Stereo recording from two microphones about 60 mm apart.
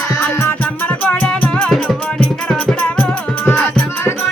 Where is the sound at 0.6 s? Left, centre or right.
Left.